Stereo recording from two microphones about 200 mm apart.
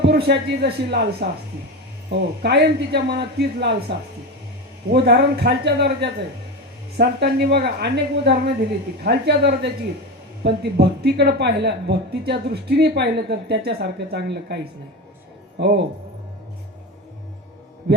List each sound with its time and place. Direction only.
0.0 s speech: 55° right (ahead or behind)